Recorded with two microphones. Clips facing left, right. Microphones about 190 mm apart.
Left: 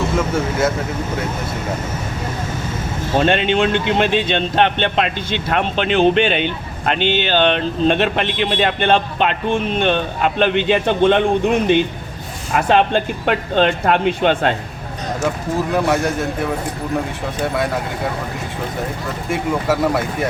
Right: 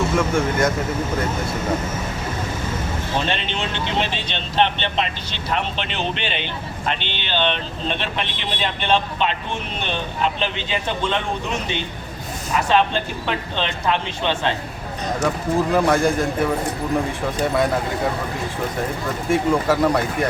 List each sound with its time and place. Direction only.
0.2 s a man's voice: 5° left (ahead or behind)
3.2 s speech: 55° left (ahead or behind)
7.0 s speech: 10° left (ahead or behind)
7.3 s a man's voice: 50° left (ahead or behind)
15.7 s a man's voice: centre (ahead or behind)
19.3 s a man's voice: centre (ahead or behind)